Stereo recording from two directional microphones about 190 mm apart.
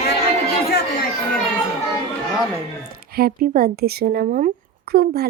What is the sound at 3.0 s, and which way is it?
Speech, 50° right (ahead or behind).